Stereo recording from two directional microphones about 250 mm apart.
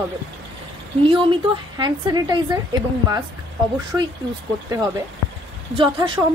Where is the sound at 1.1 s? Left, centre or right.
Centre.